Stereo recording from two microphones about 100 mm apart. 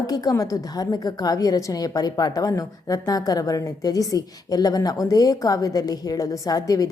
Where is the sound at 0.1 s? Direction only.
40° left (ahead or behind).